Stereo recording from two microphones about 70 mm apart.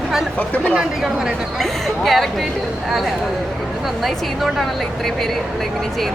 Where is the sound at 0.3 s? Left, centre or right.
Left.